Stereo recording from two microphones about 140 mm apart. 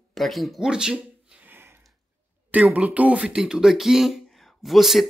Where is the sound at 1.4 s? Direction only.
15° right (ahead or behind).